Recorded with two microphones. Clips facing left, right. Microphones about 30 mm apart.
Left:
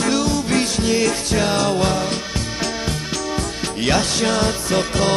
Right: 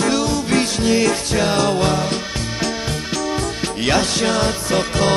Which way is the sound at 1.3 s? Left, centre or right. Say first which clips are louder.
Right 1 dB; centre.